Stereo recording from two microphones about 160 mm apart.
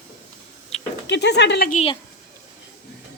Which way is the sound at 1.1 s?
90° left.